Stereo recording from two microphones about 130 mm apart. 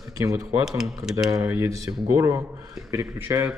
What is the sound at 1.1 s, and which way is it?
Speech, 25° right (ahead or behind).